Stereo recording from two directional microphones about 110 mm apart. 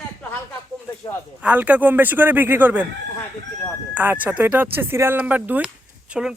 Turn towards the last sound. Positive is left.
turn(degrees=-5)  # may be behind; listen again after turning